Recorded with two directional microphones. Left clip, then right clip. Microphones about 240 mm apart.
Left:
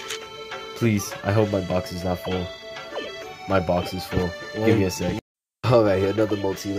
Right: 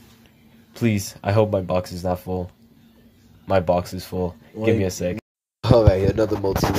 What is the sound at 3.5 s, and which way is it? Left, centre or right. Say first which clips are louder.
Speech: right 3 dB; centre.